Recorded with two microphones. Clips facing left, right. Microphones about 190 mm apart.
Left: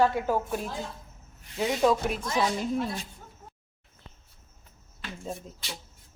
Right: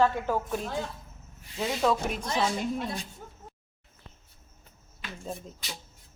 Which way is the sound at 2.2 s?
30° right (ahead or behind).